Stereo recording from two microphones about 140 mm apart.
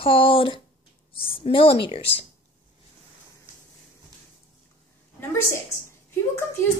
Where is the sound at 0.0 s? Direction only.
40° left (ahead or behind).